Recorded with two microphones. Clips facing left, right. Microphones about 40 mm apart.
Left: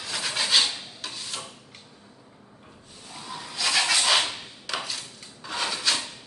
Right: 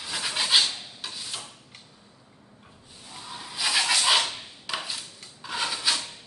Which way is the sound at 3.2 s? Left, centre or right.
Centre.